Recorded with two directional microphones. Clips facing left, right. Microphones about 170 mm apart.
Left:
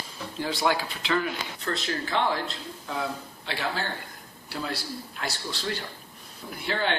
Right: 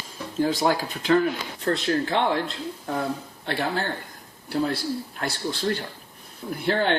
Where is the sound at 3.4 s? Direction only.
55° right (ahead or behind).